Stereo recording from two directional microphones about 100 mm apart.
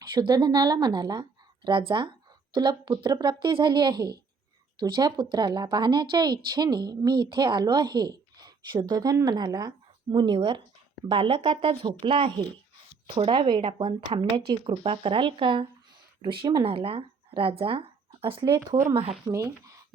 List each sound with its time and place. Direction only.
0.1 s speech: 50° right (ahead or behind)
11.1 s speech: 75° right (ahead or behind)
12.0 s a woman's voice: 55° right (ahead or behind)
14.7 s a woman's voice: 65° right (ahead or behind)
19.3 s speech: 30° right (ahead or behind)